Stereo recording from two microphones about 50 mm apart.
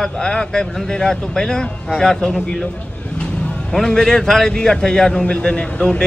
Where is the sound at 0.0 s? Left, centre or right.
Centre.